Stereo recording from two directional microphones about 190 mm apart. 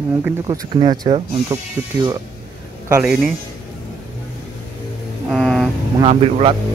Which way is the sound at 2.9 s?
5° right (ahead or behind).